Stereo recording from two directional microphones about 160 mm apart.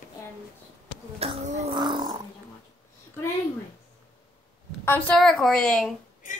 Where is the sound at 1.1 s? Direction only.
40° right (ahead or behind).